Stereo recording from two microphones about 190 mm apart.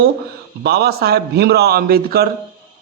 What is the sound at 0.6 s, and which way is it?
A man's voice, 60° right (ahead or behind).